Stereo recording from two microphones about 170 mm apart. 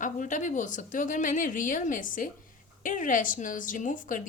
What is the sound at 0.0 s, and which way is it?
A woman's voice, 50° left (ahead or behind).